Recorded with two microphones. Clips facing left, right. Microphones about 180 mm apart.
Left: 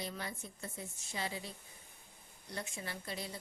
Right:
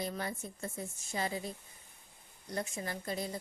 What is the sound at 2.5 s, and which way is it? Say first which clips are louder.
Speech: right 6 dB; 45° right (ahead or behind).